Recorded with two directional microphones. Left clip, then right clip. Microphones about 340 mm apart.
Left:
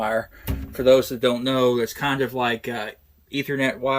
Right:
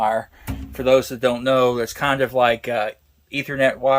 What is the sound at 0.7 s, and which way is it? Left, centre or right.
Speech, right.